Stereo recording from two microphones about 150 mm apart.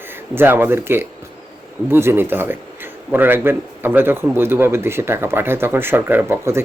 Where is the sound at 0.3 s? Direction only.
15° right (ahead or behind).